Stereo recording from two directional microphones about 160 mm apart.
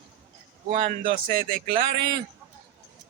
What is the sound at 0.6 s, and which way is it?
Speech, 45° right (ahead or behind).